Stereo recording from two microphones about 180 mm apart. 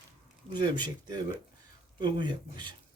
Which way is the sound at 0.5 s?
25° right (ahead or behind).